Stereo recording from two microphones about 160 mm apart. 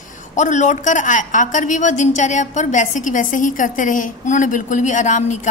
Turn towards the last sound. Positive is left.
turn(degrees=50)  # may be behind; listen again after turning